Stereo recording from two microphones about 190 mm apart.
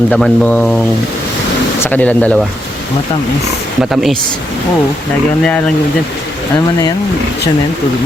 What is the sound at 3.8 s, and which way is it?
Speech, centre (ahead or behind).